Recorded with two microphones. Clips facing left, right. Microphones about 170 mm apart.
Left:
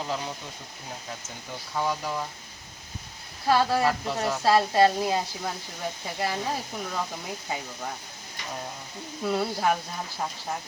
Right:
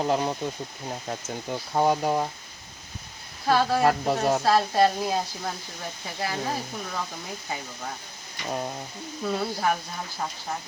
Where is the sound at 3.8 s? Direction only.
55° right (ahead or behind).